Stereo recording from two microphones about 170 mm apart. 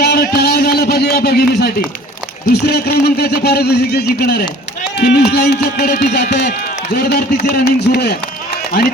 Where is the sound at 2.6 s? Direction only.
75° left (ahead or behind).